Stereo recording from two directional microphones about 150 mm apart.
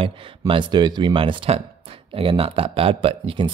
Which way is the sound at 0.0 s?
35° right (ahead or behind).